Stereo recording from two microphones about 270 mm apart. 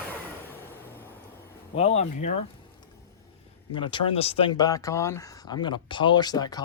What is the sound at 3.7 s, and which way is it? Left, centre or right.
Speech, centre.